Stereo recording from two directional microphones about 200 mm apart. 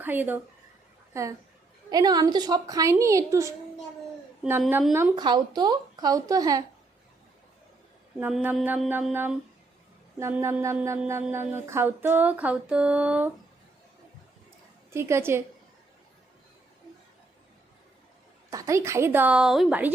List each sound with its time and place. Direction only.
0.0 s speech: 10° right (ahead or behind)
4.6 s speech: centre (ahead or behind)
5.1 s a woman's voice: 20° right (ahead or behind)
8.2 s speech: 10° right (ahead or behind)
14.9 s speech: 10° right (ahead or behind)
18.5 s speech: 15° right (ahead or behind)